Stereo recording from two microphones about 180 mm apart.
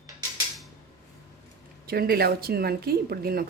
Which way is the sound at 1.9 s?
60° right (ahead or behind).